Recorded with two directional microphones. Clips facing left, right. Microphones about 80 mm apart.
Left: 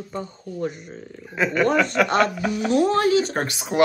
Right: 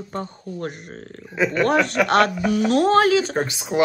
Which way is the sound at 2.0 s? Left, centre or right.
Right.